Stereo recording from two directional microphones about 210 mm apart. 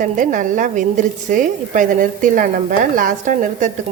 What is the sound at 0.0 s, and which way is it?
A woman's voice, 40° right (ahead or behind).